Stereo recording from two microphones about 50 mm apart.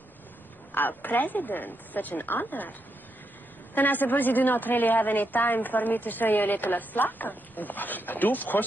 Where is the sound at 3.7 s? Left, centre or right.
Left.